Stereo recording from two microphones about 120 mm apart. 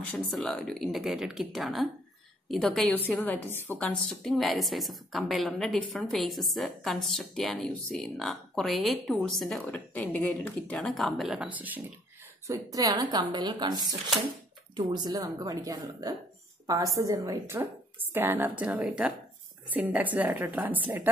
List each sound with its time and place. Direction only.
0.4 s a woman's voice: 5° left (ahead or behind)
3.4 s speech: 20° left (ahead or behind)
3.7 s a woman's voice: 5° left (ahead or behind)
10.8 s a woman's voice: centre (ahead or behind); by 11.8 s 15° right (ahead or behind)
12.4 s a woman's voice: 30° right (ahead or behind)